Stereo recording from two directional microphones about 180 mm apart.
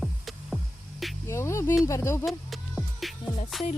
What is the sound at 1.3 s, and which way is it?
Speech, 15° left (ahead or behind).